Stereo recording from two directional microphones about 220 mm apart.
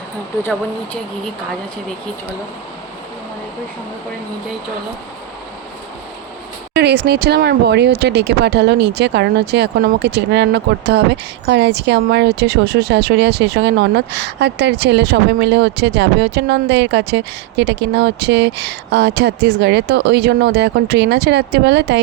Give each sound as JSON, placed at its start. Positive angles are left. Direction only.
{"t": 6.7, "sound": "speech", "side_deg": -45}